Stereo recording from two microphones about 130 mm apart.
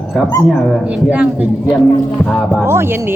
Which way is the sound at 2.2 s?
5° left (ahead or behind).